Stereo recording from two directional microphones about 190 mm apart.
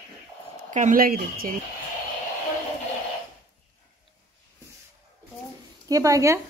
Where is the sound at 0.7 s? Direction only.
45° right (ahead or behind).